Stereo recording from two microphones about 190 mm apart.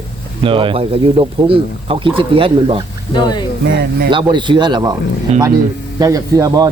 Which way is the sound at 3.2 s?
25° left (ahead or behind).